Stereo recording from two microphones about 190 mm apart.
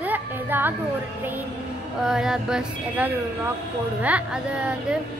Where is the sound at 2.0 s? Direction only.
5° right (ahead or behind).